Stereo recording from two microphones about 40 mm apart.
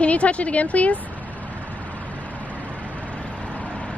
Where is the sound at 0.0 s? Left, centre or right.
Left.